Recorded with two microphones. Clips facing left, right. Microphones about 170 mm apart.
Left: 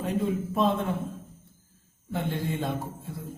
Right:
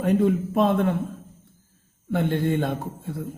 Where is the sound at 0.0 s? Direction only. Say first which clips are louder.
Right 7 dB; 60° right (ahead or behind).